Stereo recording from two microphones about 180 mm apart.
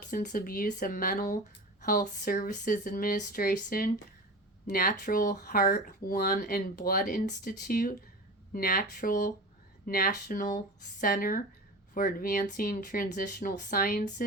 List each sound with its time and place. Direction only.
0.1 s speech: 45° left (ahead or behind)